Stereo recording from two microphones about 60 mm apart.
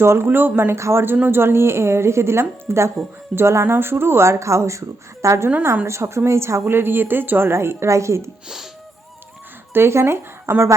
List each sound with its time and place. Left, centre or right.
0.0 s speech: right
0.3 s a woman's voice: right
0.8 s a woman's voice: right
9.7 s speech: right